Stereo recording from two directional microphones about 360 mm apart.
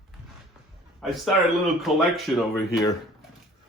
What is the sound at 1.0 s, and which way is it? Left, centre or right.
A man's voice, centre.